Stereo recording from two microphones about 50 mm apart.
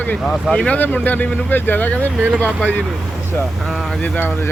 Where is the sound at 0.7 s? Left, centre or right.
Left.